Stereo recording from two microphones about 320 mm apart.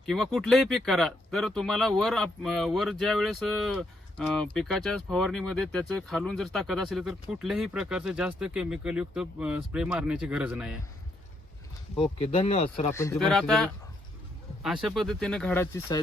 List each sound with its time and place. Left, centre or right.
0.0 s speech: centre
12.2 s speech: centre
12.9 s speech: centre